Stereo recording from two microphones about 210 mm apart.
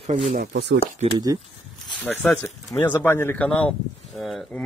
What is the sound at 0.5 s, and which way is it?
Speech, 55° right (ahead or behind).